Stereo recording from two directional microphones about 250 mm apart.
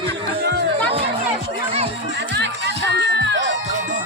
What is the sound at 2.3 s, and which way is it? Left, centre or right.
Music, right.